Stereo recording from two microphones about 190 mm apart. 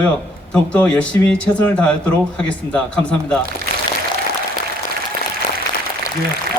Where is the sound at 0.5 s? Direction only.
5° left (ahead or behind).